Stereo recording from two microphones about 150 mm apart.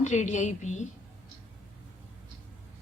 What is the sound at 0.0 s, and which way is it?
Speech, 55° left (ahead or behind).